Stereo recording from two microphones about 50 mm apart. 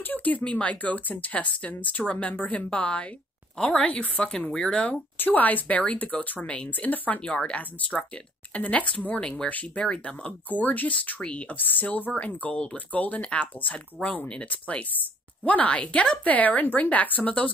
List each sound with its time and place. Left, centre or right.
0.0 s speech: left
3.5 s a woman's voice: centre
3.8 s speech: left
5.2 s speech: left
6.4 s speech: left
6.7 s speech: left
7.2 s speech: left
11.5 s speech: left; by 16.2 s centre
16.3 s speech: left